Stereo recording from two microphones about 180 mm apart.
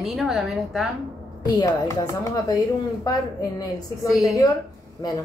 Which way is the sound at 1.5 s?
20° left (ahead or behind).